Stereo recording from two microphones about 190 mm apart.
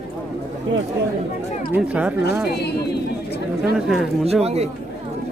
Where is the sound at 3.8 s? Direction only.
5° right (ahead or behind).